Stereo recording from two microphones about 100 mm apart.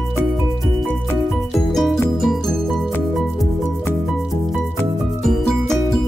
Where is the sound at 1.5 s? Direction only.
Centre (ahead or behind).